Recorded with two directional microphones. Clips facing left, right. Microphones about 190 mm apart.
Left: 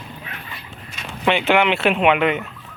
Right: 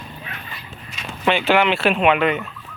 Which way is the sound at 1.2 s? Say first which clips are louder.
Even; 20° left (ahead or behind).